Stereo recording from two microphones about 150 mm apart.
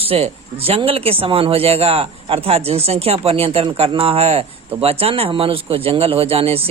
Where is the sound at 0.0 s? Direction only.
40° right (ahead or behind).